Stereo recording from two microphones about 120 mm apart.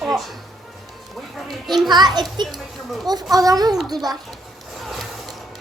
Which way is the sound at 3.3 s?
30° right (ahead or behind).